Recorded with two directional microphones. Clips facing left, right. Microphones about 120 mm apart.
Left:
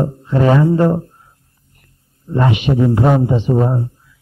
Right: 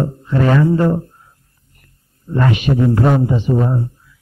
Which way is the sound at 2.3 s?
20° left (ahead or behind).